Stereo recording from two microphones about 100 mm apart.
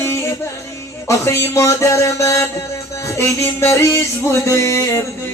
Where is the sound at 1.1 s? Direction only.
30° left (ahead or behind).